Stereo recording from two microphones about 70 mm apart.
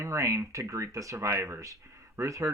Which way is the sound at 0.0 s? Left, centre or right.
Right.